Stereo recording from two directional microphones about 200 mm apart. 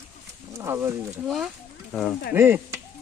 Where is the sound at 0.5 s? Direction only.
15° right (ahead or behind).